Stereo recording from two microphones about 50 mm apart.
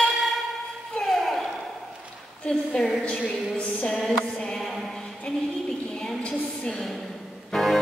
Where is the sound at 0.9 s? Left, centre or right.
Centre.